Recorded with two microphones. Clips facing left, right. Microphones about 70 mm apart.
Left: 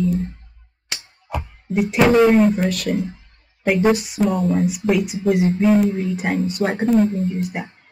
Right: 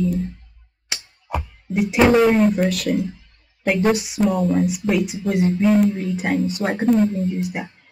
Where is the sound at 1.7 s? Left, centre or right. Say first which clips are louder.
Even; centre.